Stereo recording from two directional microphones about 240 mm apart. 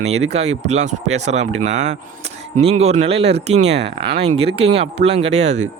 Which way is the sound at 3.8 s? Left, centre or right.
Right.